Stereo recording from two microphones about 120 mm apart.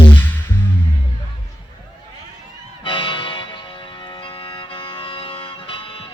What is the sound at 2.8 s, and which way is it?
Music, 45° left (ahead or behind).